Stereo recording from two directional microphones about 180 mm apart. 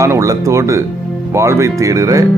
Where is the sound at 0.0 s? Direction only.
15° right (ahead or behind).